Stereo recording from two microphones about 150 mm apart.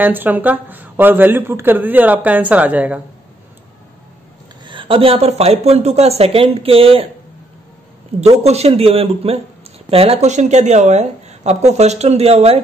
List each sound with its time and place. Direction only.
0.0 s speech: 10° right (ahead or behind)
4.6 s a woman's voice: 35° right (ahead or behind)
8.5 s a woman's voice: 45° right (ahead or behind)